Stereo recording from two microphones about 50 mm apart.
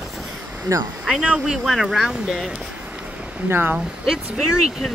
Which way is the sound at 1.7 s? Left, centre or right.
Centre.